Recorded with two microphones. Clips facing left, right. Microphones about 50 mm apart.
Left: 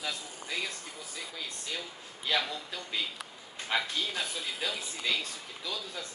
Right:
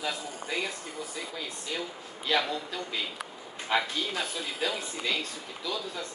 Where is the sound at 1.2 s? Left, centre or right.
Centre.